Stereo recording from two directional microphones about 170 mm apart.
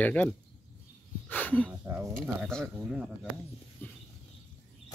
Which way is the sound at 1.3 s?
10° left (ahead or behind).